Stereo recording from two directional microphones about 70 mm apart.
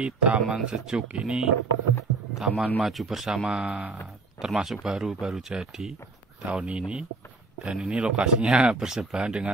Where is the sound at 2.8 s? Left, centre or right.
Centre.